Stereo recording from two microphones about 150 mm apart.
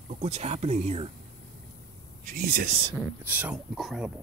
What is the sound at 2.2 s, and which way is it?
Speech, 85° right.